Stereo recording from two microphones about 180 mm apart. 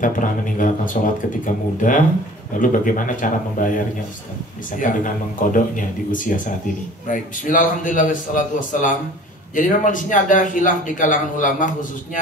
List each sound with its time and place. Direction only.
0.0 s a man's voice: 45° left (ahead or behind)